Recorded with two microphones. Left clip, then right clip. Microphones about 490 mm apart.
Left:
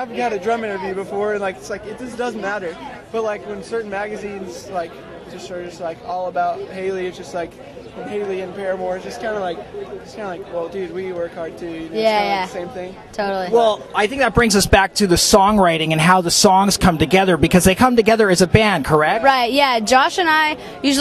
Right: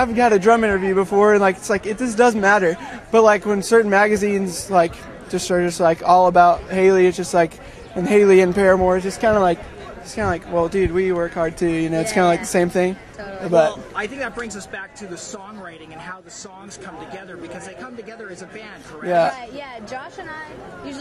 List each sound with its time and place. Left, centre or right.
0.0 s a man's voice: right
8.1 s a man's voice: right
13.9 s speech: left
19.3 s a woman's voice: left